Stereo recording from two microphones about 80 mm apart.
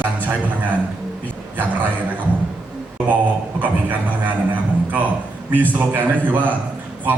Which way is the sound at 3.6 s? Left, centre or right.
Right.